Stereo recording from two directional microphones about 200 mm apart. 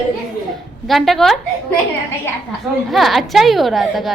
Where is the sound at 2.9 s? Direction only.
Centre (ahead or behind).